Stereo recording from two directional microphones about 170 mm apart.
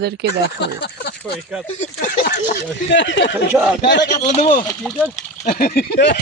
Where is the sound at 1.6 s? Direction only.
40° left (ahead or behind).